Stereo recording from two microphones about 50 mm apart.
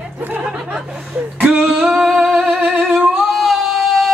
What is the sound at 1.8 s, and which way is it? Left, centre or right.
Singing, centre.